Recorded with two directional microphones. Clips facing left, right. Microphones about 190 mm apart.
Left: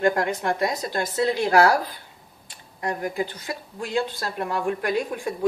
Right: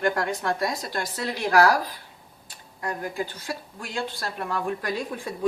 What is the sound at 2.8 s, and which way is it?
A woman's voice, 20° left (ahead or behind).